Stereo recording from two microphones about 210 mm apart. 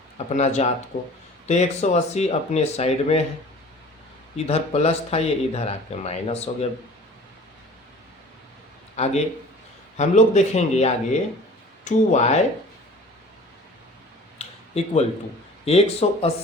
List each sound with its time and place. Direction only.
0.3 s speech: 35° left (ahead or behind)
4.4 s speech: 30° left (ahead or behind)
9.0 s speech: 30° left (ahead or behind)
14.3 s a sound: 30° left (ahead or behind)
15.6 s speech: 30° left (ahead or behind)